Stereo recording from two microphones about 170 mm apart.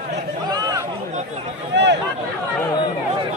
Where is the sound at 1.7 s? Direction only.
90° right.